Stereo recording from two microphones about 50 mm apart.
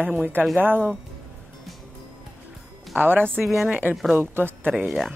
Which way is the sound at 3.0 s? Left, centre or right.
Right.